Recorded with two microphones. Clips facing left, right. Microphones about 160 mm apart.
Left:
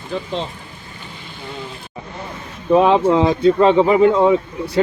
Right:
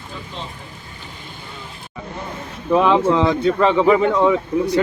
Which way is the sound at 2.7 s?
20° left (ahead or behind).